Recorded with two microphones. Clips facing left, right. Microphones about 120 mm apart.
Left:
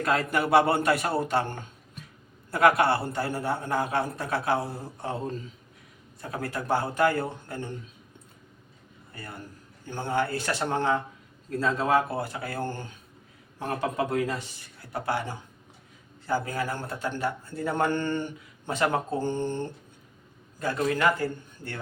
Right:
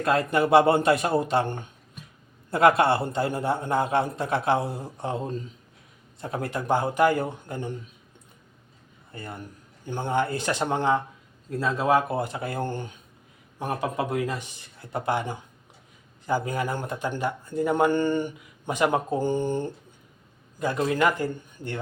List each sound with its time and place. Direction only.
0.0 s a man's voice: 25° right (ahead or behind)
6.2 s a man's voice: 25° right (ahead or behind)
9.1 s a man's voice: 20° right (ahead or behind)